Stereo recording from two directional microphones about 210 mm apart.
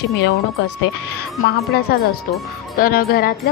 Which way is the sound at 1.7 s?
50° left (ahead or behind).